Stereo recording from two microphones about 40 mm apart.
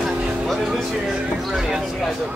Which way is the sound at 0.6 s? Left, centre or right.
Centre.